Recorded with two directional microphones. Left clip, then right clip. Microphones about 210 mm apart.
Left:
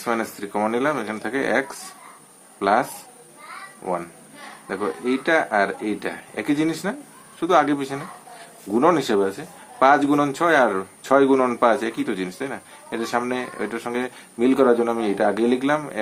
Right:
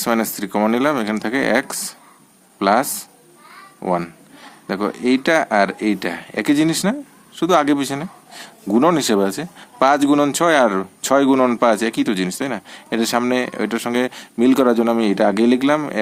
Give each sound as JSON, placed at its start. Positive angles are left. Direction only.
{"t": 0.0, "sound": "a man's voice", "side_deg": -40}
{"t": 3.8, "sound": "a man's voice", "side_deg": -40}